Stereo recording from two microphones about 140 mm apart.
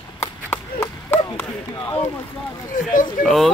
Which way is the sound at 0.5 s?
15° left (ahead or behind).